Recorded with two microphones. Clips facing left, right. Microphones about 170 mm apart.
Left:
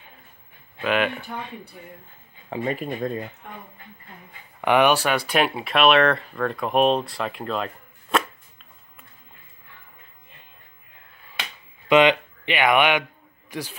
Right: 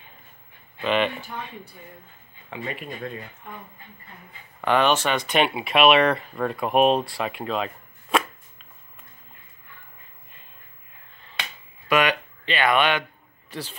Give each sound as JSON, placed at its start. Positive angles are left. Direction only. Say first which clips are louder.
{"t": 0.8, "sound": "speech", "louder": "even", "side_deg": 5}
{"t": 2.5, "sound": "speech", "louder": "left 6 dB", "side_deg": 40}
{"t": 4.6, "sound": "speech", "louder": "left 2 dB", "side_deg": 15}
{"t": 11.9, "sound": "a man's voice", "louder": "left 5 dB", "side_deg": 25}